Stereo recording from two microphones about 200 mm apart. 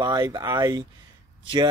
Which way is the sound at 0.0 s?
20° right (ahead or behind).